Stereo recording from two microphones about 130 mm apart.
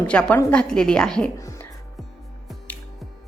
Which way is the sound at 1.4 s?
25° left (ahead or behind).